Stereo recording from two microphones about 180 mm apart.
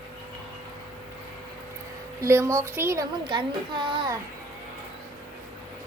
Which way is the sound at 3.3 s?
25° right (ahead or behind).